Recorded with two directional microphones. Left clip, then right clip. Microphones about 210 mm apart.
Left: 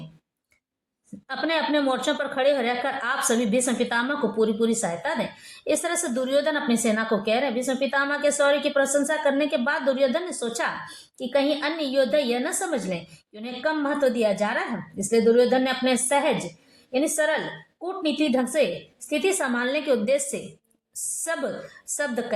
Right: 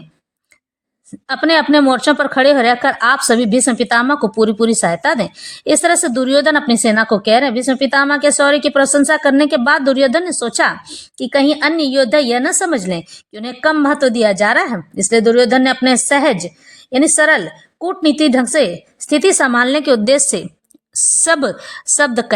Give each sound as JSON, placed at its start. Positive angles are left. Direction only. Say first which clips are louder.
{"t": 1.3, "sound": "a woman's voice", "louder": "right 12 dB", "side_deg": -45}